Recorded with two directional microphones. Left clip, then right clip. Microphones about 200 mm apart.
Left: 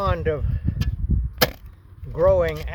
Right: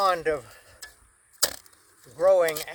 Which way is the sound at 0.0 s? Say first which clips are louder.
Even; centre (ahead or behind).